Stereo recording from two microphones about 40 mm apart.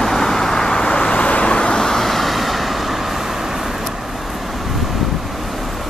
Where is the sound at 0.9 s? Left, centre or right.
Left.